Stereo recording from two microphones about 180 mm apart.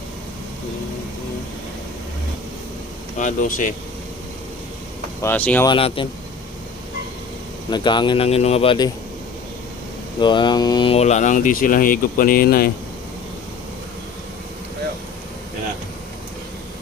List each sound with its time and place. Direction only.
3.2 s speech: 45° left (ahead or behind)
5.2 s speech: 10° left (ahead or behind)
5.6 s speech: 30° left (ahead or behind)
7.7 s speech: 25° left (ahead or behind)
10.2 s speech: 25° left (ahead or behind); by 12.7 s 55° left (ahead or behind)